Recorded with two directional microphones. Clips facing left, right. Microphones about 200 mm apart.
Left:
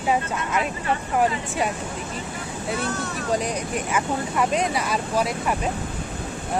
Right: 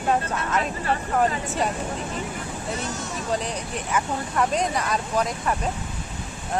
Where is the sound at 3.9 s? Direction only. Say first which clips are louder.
Even; 5° left (ahead or behind).